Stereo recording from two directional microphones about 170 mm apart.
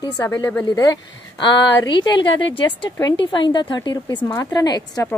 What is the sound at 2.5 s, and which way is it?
A woman's voice, 25° left (ahead or behind).